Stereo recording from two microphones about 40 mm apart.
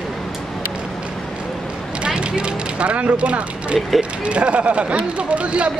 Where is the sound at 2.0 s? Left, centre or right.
Right.